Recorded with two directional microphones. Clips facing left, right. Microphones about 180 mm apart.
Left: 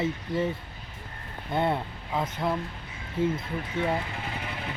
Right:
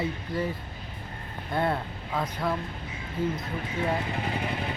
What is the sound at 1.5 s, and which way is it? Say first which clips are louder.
Speech: left 1 dB; 20° left (ahead or behind).